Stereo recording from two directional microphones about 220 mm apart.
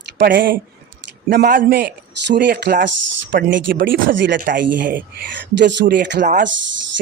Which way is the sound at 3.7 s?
55° right (ahead or behind).